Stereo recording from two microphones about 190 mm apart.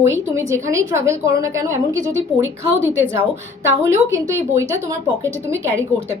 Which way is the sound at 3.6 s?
15° right (ahead or behind).